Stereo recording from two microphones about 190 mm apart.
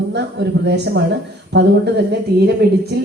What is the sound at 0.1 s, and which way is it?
A woman's voice, 65° right (ahead or behind).